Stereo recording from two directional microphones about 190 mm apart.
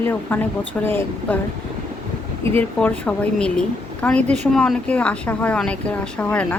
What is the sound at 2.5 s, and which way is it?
Speech, 10° left (ahead or behind).